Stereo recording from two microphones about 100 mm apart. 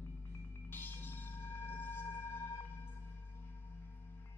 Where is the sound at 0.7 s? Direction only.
20° left (ahead or behind).